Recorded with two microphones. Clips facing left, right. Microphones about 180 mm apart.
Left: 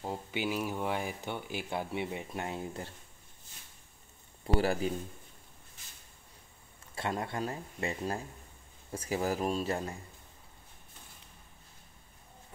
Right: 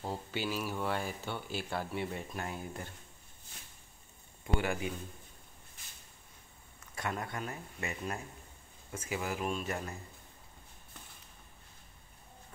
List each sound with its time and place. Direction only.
0.0 s speech: 15° left (ahead or behind)
4.6 s speech: 35° left (ahead or behind)
7.0 s speech: 30° left (ahead or behind)